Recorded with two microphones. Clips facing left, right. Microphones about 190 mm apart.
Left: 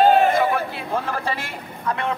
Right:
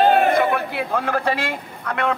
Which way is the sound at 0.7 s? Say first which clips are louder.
Right 3 dB; 65° right (ahead or behind).